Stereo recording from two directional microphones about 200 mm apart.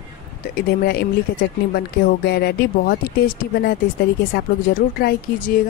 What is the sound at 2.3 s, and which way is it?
Speech, 55° left (ahead or behind).